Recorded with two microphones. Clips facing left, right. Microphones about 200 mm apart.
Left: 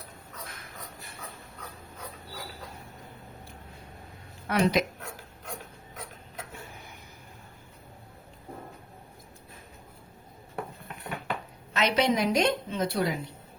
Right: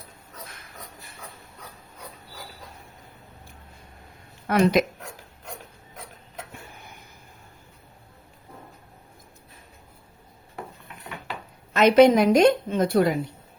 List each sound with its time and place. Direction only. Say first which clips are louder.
4.4 s a woman's voice: right 5 dB; 55° right (ahead or behind)
11.7 s a woman's voice: right 10 dB; 50° right (ahead or behind)